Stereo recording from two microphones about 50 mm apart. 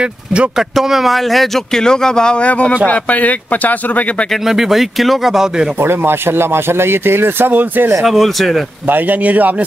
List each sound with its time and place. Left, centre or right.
0.0 s speech: right
0.6 s speech: centre
1.8 s speech: centre
2.9 s speech: left
4.5 s speech: centre
5.8 s speech: right
8.0 s speech: centre
8.8 s speech: right